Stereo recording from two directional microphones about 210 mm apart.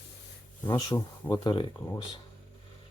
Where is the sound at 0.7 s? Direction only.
15° left (ahead or behind).